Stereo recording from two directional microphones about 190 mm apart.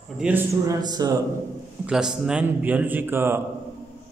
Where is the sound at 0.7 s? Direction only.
20° right (ahead or behind).